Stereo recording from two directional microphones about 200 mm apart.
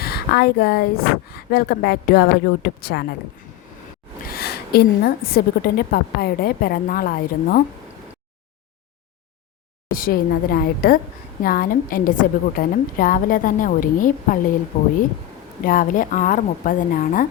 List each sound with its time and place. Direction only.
0.0 s a woman's voice: 50° left (ahead or behind)
4.3 s a woman's voice: 50° left (ahead or behind)
9.9 s a woman's voice: 45° left (ahead or behind)